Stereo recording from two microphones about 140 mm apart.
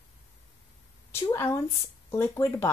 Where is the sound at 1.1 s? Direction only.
20° left (ahead or behind).